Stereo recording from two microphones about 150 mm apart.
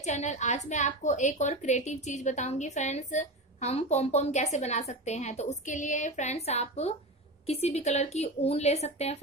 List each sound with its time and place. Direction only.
0.0 s a woman's voice: 50° left (ahead or behind)